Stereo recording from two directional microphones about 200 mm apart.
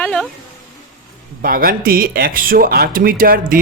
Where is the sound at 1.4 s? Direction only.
45° right (ahead or behind).